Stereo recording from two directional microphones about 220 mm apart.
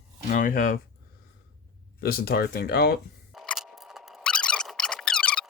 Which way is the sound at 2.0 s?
45° left (ahead or behind).